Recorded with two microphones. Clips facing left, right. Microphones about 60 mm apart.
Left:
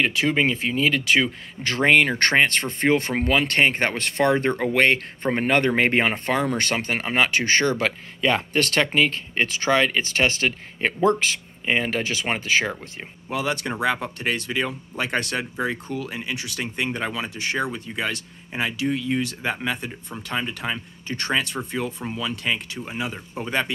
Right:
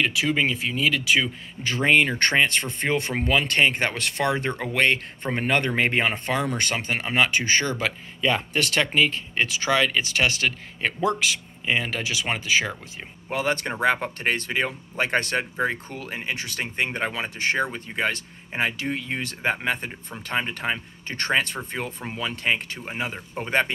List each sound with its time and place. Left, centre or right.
0.0 s speech: left
1.6 s speech: left
13.3 s speech: right